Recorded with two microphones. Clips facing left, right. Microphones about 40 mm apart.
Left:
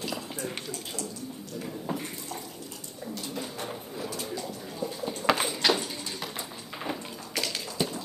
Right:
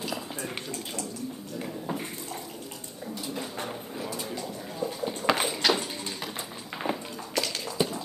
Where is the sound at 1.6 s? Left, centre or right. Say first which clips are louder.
Even; centre.